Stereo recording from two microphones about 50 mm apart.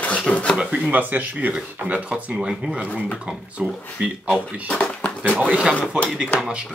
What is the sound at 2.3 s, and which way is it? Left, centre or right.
Speech, centre.